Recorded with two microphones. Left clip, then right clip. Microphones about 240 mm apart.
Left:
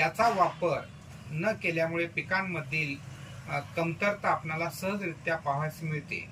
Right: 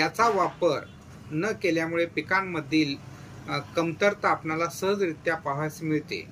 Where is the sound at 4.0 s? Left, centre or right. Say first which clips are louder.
Right 5 dB; centre.